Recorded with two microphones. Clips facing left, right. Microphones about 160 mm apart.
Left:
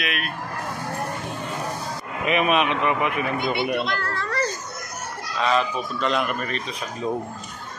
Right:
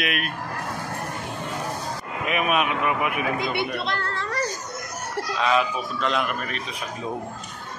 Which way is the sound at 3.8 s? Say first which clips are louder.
Left 1 dB; 30° right (ahead or behind).